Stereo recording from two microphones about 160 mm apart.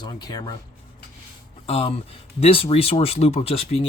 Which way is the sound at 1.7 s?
40° left (ahead or behind).